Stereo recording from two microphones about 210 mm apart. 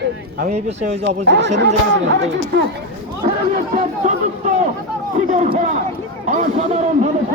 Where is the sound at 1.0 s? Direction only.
55° right (ahead or behind).